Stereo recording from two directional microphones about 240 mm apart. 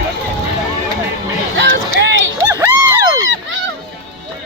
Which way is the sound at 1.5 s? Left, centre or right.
Right.